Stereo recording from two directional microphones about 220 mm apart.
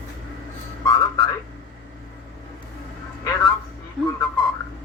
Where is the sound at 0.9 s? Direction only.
15° left (ahead or behind).